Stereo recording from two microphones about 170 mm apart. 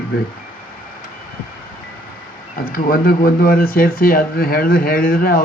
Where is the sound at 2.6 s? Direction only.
60° left (ahead or behind).